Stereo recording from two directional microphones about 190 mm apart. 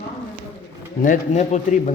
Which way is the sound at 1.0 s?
40° left (ahead or behind).